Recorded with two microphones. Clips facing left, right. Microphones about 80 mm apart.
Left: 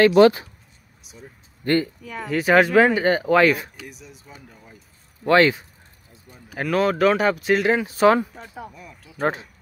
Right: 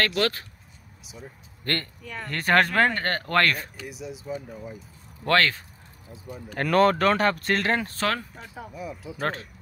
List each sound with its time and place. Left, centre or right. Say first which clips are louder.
0.0 s speech: left 12 dB; centre
1.0 s speech: right 1 dB; centre
1.6 s speech: left 10 dB; centre
3.8 s speech: right 6 dB; centre
5.2 s speech: left 6 dB; centre
6.5 s speech: right 1 dB; centre
8.4 s speech: left 3 dB; centre
8.7 s speech: right 8 dB; centre
9.2 s speech: left 6 dB; centre